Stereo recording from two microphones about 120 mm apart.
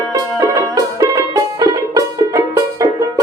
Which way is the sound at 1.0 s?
35° right (ahead or behind).